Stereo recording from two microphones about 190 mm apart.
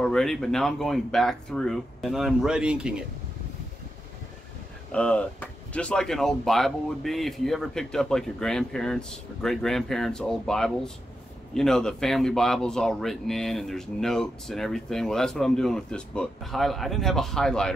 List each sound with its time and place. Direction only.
0.0 s speech: centre (ahead or behind)
4.9 s speech: 5° left (ahead or behind)